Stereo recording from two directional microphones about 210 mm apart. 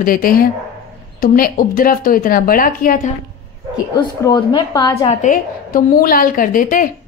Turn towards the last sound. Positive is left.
turn(degrees=40)  # may be behind; listen again after turning